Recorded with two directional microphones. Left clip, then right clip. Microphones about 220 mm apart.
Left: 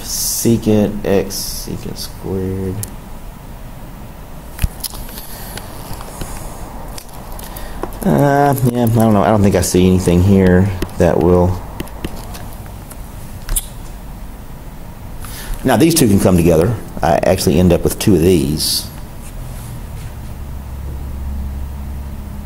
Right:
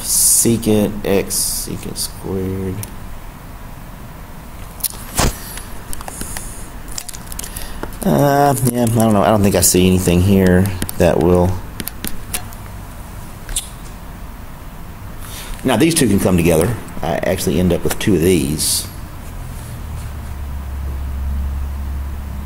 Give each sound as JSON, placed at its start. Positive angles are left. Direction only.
{"t": 0.0, "sound": "speech", "side_deg": 15}
{"t": 8.0, "sound": "speech", "side_deg": 0}
{"t": 15.6, "sound": "speech", "side_deg": 15}